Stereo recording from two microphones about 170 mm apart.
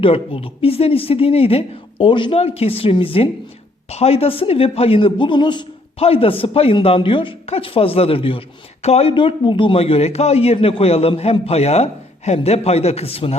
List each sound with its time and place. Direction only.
0.0 s a man's voice: 30° left (ahead or behind)